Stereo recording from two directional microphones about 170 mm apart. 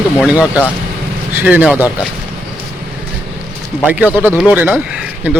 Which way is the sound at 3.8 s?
10° right (ahead or behind).